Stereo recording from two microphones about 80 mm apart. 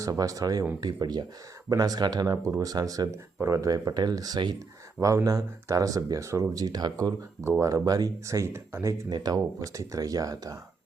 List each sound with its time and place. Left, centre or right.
0.0 s speech: right
4.9 s speech: right
9.0 s speech: right
9.4 s speech: right